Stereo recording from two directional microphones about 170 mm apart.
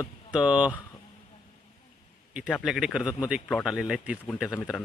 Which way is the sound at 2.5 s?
Centre (ahead or behind).